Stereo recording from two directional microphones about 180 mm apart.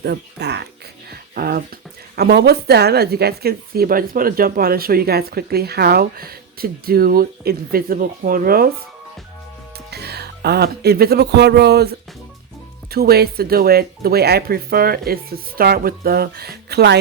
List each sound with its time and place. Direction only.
0.0 s speech: 65° right (ahead or behind)
1.1 s speech: 60° right (ahead or behind)
9.7 s speech: 65° right (ahead or behind)